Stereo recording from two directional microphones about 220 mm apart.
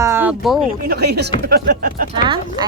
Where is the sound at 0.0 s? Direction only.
10° right (ahead or behind).